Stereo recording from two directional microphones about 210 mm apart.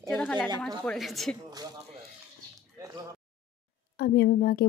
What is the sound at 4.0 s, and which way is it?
Speech, 50° left (ahead or behind).